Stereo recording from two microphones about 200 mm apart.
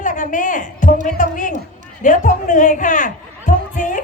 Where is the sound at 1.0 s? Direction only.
40° left (ahead or behind).